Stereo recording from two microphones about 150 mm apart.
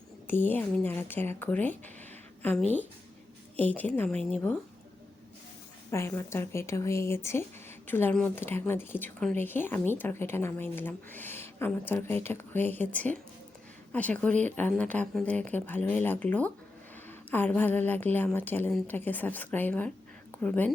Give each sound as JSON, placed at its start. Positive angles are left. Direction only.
{"t": 0.3, "sound": "a woman's voice", "side_deg": 15}
{"t": 5.9, "sound": "speech", "side_deg": 15}